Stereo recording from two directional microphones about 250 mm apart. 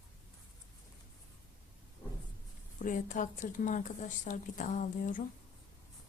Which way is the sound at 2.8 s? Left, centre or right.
Left.